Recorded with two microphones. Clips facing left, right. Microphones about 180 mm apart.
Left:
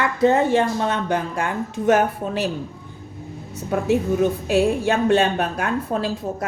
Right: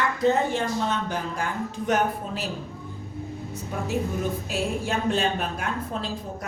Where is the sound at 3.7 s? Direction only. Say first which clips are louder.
Left 9 dB; 75° left (ahead or behind).